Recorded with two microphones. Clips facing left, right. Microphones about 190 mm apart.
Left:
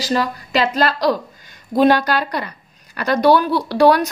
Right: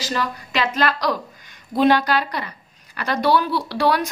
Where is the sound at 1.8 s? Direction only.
45° left (ahead or behind).